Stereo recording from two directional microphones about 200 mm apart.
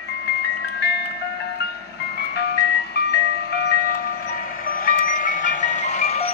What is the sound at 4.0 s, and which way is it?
Ice cream truck, 45° left (ahead or behind).